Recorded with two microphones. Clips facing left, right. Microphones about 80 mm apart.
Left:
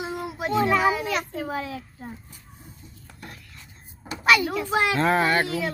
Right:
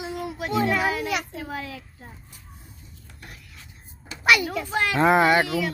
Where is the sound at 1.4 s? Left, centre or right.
Left.